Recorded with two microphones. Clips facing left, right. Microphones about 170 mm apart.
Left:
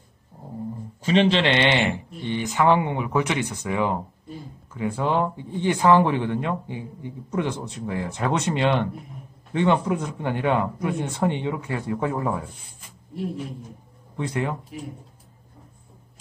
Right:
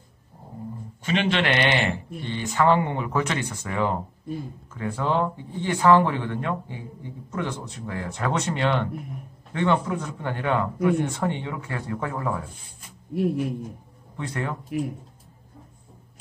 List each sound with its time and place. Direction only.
1.0 s speech: 30° left (ahead or behind)
14.1 s speech: 15° left (ahead or behind)